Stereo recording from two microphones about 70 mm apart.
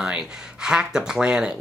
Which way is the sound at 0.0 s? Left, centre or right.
Centre.